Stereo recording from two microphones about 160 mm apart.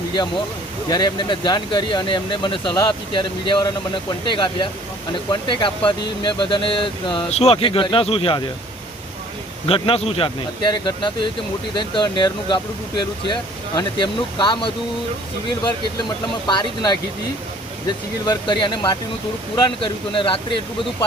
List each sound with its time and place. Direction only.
0.2 s speech: 30° left (ahead or behind)
7.3 s speech: 40° left (ahead or behind)
9.6 s speech: 35° left (ahead or behind)
11.7 s speech: 30° left (ahead or behind)